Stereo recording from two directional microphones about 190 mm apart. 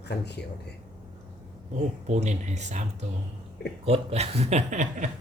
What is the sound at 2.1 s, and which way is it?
Speech, 35° right (ahead or behind).